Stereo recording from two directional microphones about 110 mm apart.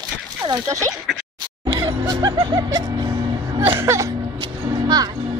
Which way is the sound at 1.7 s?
40° right (ahead or behind).